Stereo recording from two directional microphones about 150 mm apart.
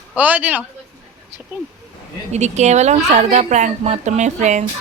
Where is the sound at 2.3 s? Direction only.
50° right (ahead or behind).